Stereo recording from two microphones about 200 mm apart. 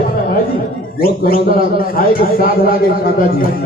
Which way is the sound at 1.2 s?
45° left (ahead or behind).